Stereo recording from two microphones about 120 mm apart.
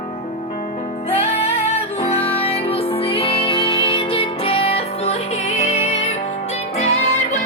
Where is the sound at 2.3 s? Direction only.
55° left (ahead or behind); by 6.2 s 70° left (ahead or behind).